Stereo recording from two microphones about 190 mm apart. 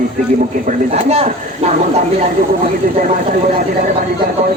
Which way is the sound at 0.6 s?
35° right (ahead or behind).